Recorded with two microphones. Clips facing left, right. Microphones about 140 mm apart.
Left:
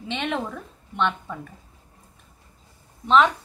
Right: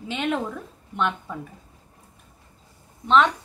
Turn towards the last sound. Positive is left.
turn(degrees=0)  # may be behind; listen again after turning